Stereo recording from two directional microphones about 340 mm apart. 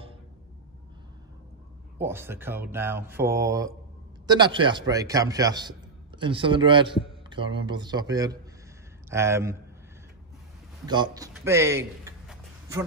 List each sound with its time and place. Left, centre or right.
2.0 s a man's voice: centre
10.9 s a man's voice: centre